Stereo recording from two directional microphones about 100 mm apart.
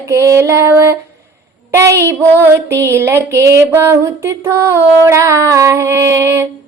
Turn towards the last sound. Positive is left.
turn(degrees=-25)  # may be behind; listen again after turning